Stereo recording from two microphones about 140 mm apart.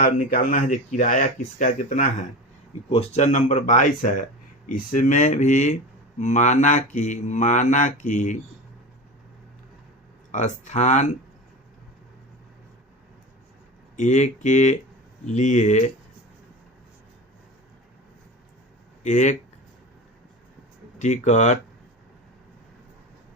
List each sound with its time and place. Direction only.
0.0 s speech: 60° left (ahead or behind)
2.9 s speech: 50° left (ahead or behind)
10.3 s speech: 60° left (ahead or behind)
13.9 s speech: 60° left (ahead or behind)
19.0 s speech: 60° left (ahead or behind)
21.0 s speech: 60° left (ahead or behind)